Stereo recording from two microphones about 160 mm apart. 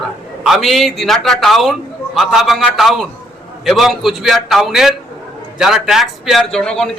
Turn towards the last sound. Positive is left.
turn(degrees=5)  # may be behind; listen again after turning